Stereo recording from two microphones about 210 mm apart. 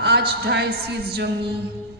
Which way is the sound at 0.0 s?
50° right (ahead or behind).